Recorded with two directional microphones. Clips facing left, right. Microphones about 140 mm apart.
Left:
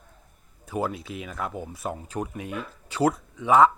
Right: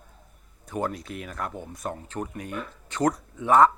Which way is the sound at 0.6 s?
5° left (ahead or behind).